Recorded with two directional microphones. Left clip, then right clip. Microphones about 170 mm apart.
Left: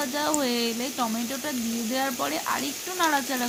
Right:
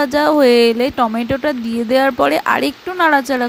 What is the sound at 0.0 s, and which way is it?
Speech, 60° right (ahead or behind).